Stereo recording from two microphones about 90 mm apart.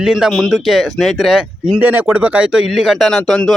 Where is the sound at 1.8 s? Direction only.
15° right (ahead or behind); by 3.5 s 5° left (ahead or behind).